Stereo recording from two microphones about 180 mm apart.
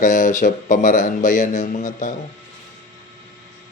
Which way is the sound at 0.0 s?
45° left (ahead or behind).